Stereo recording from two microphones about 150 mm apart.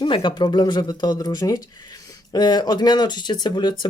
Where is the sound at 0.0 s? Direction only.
30° left (ahead or behind).